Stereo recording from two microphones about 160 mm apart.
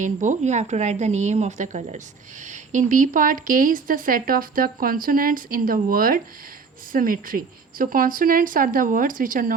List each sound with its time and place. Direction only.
0.0 s a woman's voice: 50° right (ahead or behind)